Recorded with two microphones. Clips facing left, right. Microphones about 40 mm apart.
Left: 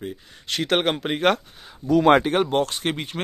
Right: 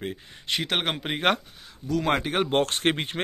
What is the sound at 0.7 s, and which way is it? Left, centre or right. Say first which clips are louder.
Speech: left 8 dB; centre.